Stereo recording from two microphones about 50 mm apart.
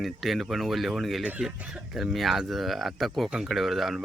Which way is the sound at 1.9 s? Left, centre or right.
Centre.